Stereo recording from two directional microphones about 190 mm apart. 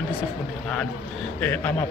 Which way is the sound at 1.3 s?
10° left (ahead or behind).